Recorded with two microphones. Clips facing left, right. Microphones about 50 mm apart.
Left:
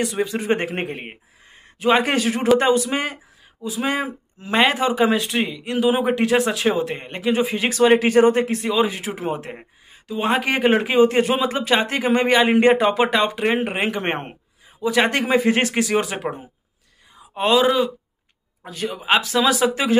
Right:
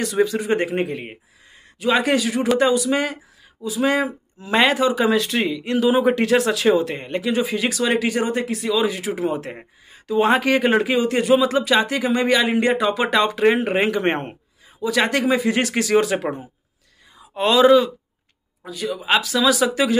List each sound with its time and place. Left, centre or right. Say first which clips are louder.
0.0 s speech: right 3 dB; left
0.4 s a man's voice: right 1 dB; left
3.8 s speech: right 4 dB; left
5.9 s speech: right 1 dB; left
9.6 s speech: right 3 dB; centre
10.4 s a man's voice: right 1 dB; centre
13.1 s a man's voice: right 2 dB; centre; by 15.7 s left
15.7 s speech: right 3 dB; centre
17.3 s speech: right 3 dB; centre
18.7 s a man's voice: even; left